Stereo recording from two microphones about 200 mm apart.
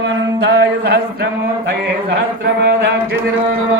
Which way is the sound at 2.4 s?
55° right (ahead or behind).